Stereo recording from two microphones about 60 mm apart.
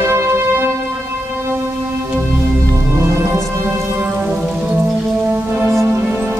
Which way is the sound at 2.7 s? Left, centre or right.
Right.